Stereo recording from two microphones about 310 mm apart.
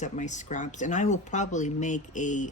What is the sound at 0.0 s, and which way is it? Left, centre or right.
Speech, left.